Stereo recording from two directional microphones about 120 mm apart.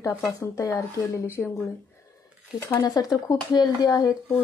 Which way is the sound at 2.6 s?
30° left (ahead or behind).